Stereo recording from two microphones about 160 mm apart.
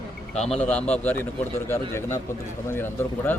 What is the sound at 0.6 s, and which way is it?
Speech, 10° left (ahead or behind).